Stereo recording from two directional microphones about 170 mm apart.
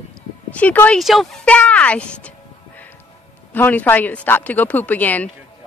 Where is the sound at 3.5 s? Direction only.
10° left (ahead or behind).